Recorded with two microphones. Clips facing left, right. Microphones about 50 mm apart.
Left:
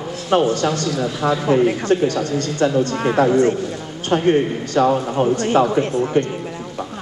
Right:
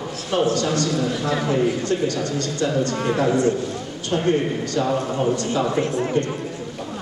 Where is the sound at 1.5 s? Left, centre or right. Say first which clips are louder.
Left 6 dB; left.